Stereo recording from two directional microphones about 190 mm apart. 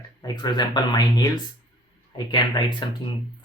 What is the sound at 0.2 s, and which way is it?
Speech, 20° left (ahead or behind).